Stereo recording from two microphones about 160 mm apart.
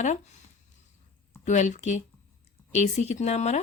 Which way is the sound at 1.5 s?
50° left (ahead or behind).